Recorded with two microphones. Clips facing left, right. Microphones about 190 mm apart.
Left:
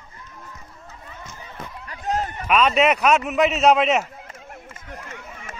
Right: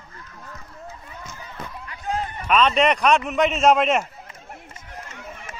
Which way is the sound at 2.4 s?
5° left (ahead or behind).